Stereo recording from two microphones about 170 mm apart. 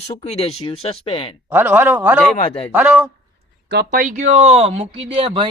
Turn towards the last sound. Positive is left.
turn(degrees=-30)  # may be behind; listen again after turning